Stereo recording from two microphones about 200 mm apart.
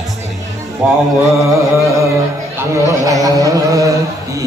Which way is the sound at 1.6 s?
15° right (ahead or behind).